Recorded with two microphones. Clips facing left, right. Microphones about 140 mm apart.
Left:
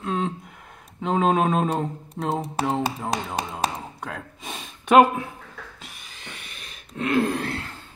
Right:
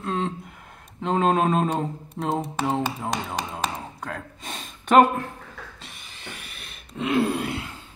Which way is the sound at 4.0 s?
Centre (ahead or behind).